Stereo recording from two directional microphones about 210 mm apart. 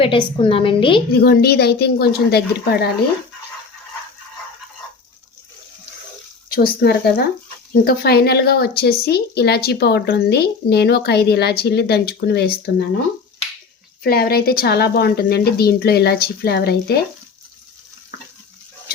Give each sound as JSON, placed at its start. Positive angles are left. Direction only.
{"t": 0.0, "sound": "a woman's voice", "side_deg": 25}
{"t": 1.2, "sound": "a woman's voice", "side_deg": 50}
{"t": 6.5, "sound": "a woman's voice", "side_deg": 45}
{"t": 14.0, "sound": "a woman's voice", "side_deg": 45}